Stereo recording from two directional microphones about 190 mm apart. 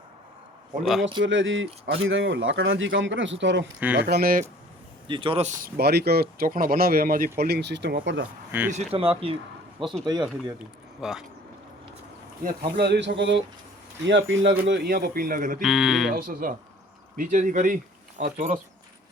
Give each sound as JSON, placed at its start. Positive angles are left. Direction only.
{"t": 0.8, "sound": "speech", "side_deg": 0}
{"t": 1.2, "sound": "speech", "side_deg": -85}
{"t": 3.9, "sound": "speech", "side_deg": -55}
{"t": 5.0, "sound": "speech", "side_deg": -25}
{"t": 8.7, "sound": "speech", "side_deg": -30}
{"t": 11.0, "sound": "speech", "side_deg": -5}
{"t": 12.7, "sound": "speech", "side_deg": -60}
{"t": 14.6, "sound": "speech", "side_deg": -55}
{"t": 15.6, "sound": "speech", "side_deg": 0}
{"t": 16.1, "sound": "speech", "side_deg": -50}